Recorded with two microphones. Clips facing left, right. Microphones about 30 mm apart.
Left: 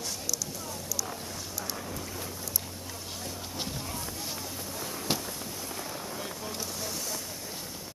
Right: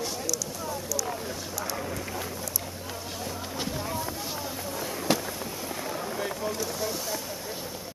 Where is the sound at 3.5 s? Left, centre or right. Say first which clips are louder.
Right 6 dB; centre.